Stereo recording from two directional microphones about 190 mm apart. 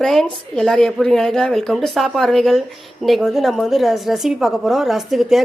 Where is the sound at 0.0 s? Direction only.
Centre (ahead or behind).